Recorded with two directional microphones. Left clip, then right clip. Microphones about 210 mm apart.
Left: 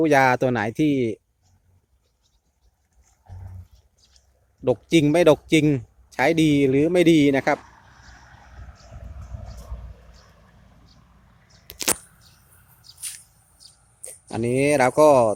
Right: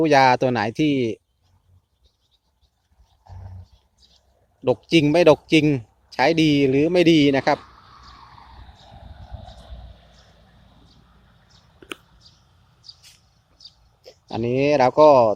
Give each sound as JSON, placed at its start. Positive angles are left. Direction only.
{"t": 0.0, "sound": "speech", "side_deg": 5}
{"t": 4.6, "sound": "speech", "side_deg": 5}
{"t": 7.6, "sound": "vehicle", "side_deg": 45}
{"t": 9.5, "sound": "wild animals", "side_deg": 20}
{"t": 11.3, "sound": "arrow", "side_deg": -5}
{"t": 13.6, "sound": "a sound", "side_deg": 5}